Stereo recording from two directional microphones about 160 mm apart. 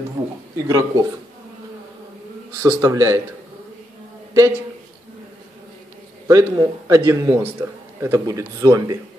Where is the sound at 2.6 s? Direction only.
20° right (ahead or behind).